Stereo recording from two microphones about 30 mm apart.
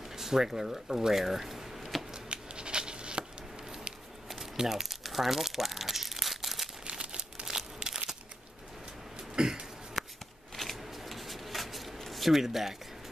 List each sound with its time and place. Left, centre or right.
0.1 s speech: centre
2.1 s a sound: right
4.6 s crumpling: centre
6.9 s crumpling: right
7.8 s crushing: right
9.3 s cough: right
10.0 s shuffling cards: centre
12.4 s speech: centre